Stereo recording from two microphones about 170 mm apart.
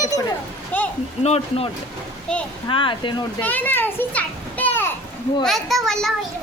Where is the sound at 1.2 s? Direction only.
35° left (ahead or behind).